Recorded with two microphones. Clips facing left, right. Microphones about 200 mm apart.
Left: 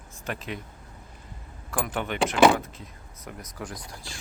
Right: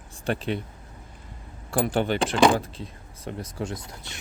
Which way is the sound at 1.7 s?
30° right (ahead or behind).